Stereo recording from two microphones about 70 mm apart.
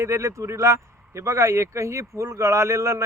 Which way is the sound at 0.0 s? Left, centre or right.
Right.